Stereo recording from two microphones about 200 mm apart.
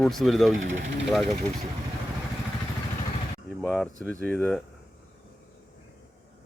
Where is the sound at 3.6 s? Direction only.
10° left (ahead or behind).